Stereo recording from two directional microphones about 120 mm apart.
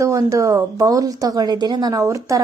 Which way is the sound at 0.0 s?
25° right (ahead or behind).